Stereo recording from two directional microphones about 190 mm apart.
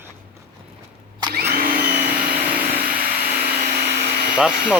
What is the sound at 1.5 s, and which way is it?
Vacuum cleaner, 50° right (ahead or behind).